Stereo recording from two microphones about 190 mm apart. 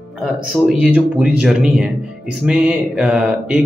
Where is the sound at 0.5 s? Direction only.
5° right (ahead or behind).